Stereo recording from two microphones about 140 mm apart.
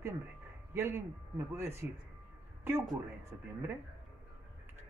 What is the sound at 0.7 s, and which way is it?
Speech, 15° right (ahead or behind).